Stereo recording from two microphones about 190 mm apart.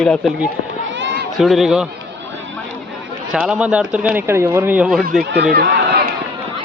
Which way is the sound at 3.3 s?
5° right (ahead or behind).